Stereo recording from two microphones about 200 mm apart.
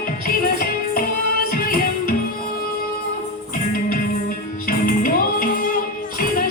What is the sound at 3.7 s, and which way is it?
Music, 45° left (ahead or behind).